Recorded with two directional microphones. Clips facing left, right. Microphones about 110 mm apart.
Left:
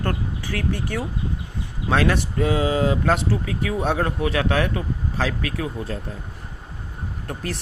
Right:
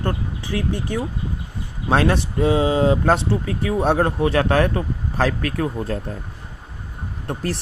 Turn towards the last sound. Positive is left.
turn(degrees=-30)  # may be behind; listen again after turning